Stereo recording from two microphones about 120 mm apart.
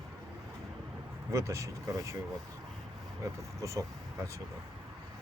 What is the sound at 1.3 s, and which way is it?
Speech, 25° right (ahead or behind).